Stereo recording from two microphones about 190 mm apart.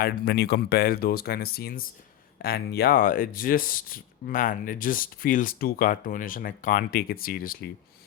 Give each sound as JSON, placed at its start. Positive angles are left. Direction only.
{"t": 0.0, "sound": "speech", "side_deg": 60}